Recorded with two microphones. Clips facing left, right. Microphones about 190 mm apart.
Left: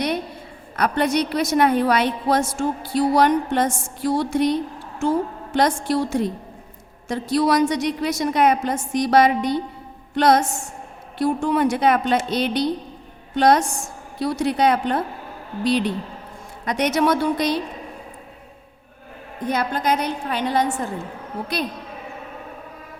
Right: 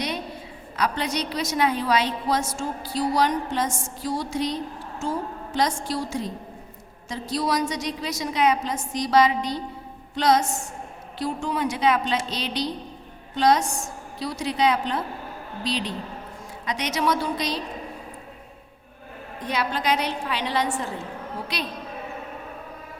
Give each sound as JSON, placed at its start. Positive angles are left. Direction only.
{"t": 0.8, "sound": "music", "side_deg": 55}
{"t": 19.5, "sound": "a woman's voice", "side_deg": 50}